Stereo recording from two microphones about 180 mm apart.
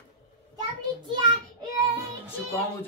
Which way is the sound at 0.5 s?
25° right (ahead or behind).